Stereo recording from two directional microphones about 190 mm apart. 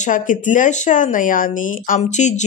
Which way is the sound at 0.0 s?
45° left (ahead or behind).